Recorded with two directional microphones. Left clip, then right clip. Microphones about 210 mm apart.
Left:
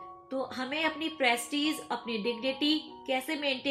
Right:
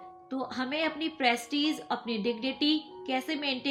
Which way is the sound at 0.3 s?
45° right (ahead or behind).